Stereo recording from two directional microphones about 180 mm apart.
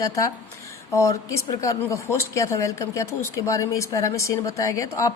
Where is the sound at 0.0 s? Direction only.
20° left (ahead or behind).